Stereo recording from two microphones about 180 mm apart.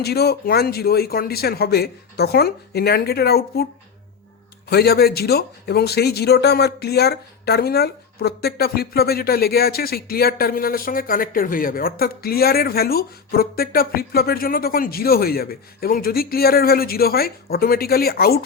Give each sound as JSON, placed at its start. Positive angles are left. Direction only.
{"t": 0.0, "sound": "speech", "side_deg": 60}
{"t": 4.7, "sound": "speech", "side_deg": 60}